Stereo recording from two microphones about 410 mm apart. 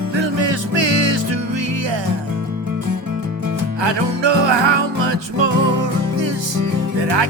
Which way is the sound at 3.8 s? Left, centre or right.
Right.